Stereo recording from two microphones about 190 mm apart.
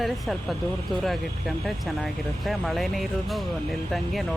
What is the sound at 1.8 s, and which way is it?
Speech, centre (ahead or behind).